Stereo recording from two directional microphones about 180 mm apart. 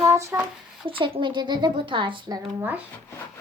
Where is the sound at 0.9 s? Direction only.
30° right (ahead or behind).